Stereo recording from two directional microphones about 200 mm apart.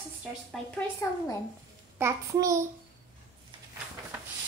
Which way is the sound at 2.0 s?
15° right (ahead or behind).